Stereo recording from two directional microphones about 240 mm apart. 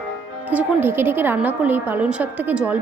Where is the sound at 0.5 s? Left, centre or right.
Centre.